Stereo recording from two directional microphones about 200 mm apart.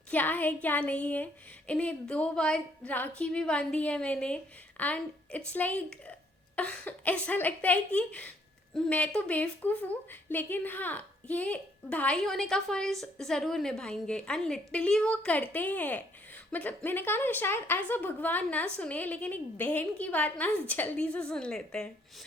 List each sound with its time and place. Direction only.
0.1 s a woman's voice: 10° left (ahead or behind)